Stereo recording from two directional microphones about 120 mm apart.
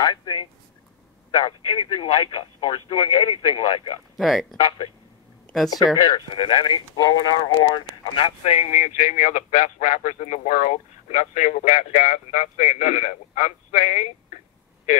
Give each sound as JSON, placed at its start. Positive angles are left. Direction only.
{"t": 0.0, "sound": "speech", "side_deg": 40}
{"t": 4.2, "sound": "speech", "side_deg": 0}
{"t": 4.6, "sound": "speech", "side_deg": 40}
{"t": 6.0, "sound": "speech", "side_deg": 45}